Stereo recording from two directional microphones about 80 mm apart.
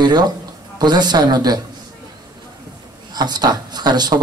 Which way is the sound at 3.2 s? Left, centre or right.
Right.